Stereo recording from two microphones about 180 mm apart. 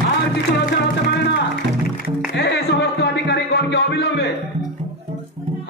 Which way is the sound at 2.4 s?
70° left (ahead or behind).